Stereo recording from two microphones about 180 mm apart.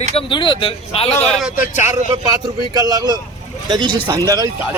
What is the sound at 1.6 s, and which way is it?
Speech, 15° right (ahead or behind).